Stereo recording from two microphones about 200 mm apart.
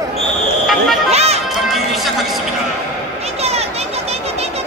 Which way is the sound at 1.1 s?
30° right (ahead or behind).